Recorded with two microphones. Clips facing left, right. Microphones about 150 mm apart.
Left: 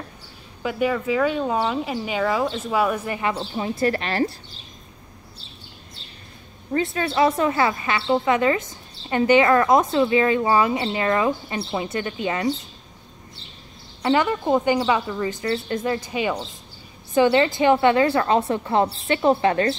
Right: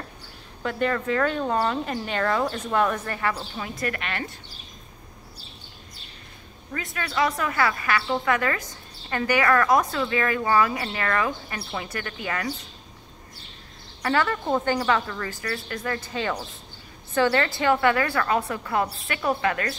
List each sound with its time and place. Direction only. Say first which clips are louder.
0.6 s a woman's voice: left 3 dB; 5° left (ahead or behind); by 4.4 s 35° left (ahead or behind)
6.7 s speech: left 8 dB; 30° left (ahead or behind)
14.0 s a woman's voice: left 4 dB; 20° left (ahead or behind)